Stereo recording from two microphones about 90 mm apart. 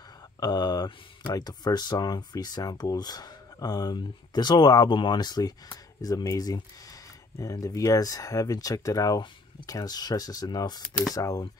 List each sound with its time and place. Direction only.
0.4 s speech: 50° left (ahead or behind)